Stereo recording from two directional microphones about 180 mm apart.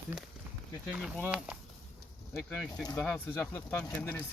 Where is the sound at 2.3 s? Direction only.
15° left (ahead or behind).